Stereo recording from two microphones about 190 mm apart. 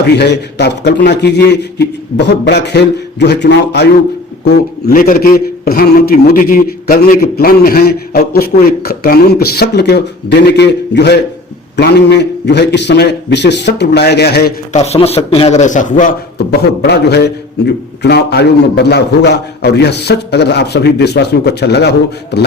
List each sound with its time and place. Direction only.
0.0 s a man's voice: 60° left (ahead or behind)
14.7 s a man's voice: 35° left (ahead or behind)
16.4 s a man's voice: 60° left (ahead or behind)